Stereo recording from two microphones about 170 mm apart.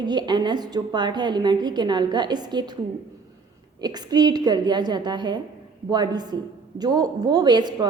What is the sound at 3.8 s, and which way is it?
A woman's voice, 25° right (ahead or behind).